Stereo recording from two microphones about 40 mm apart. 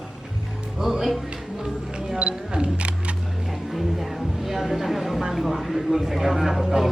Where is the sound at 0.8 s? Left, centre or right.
Centre.